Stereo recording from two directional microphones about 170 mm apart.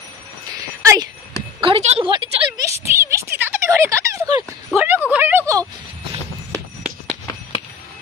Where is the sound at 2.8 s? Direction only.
15° right (ahead or behind).